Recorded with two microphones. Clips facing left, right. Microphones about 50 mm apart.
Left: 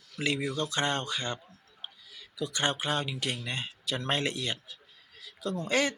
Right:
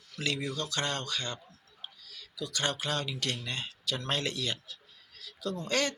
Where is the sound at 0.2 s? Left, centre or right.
Left.